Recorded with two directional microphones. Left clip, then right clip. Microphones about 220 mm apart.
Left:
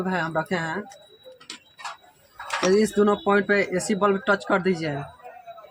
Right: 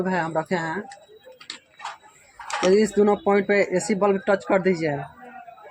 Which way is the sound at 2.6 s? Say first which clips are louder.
Right 2 dB; 15° left (ahead or behind).